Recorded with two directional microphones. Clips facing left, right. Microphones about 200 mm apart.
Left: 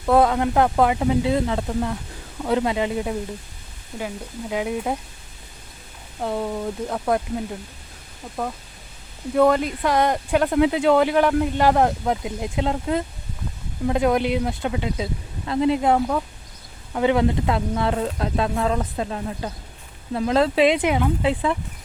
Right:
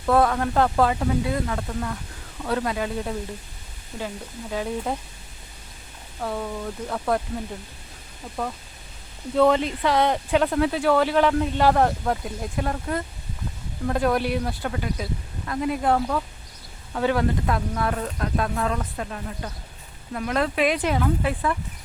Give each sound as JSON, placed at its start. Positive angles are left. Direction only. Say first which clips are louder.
{"t": 0.0, "sound": "speech", "louder": "left 3 dB", "side_deg": 20}
{"t": 6.1, "sound": "speech", "louder": "left 4 dB", "side_deg": 25}
{"t": 6.9, "sound": "speech", "louder": "left 2 dB", "side_deg": 10}
{"t": 9.3, "sound": "speech", "louder": "left 1 dB", "side_deg": 10}
{"t": 10.6, "sound": "speech", "louder": "left 3 dB", "side_deg": 15}